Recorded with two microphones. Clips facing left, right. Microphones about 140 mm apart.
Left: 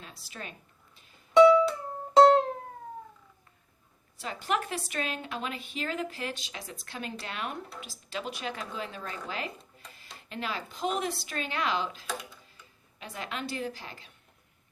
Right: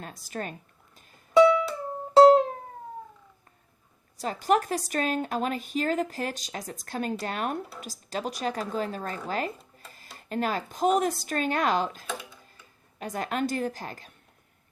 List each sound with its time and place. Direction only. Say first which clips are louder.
0.0 s speech: right 8 dB; 45° right (ahead or behind)
1.3 s music: left 1 dB; centre (ahead or behind)
4.2 s a woman's voice: right 7 dB; 40° right (ahead or behind)